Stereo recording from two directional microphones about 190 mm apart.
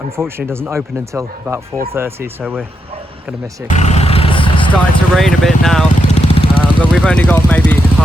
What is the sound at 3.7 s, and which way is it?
Vehicle, 35° left (ahead or behind).